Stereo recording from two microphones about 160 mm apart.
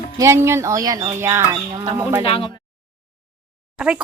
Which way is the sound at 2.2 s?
35° left (ahead or behind).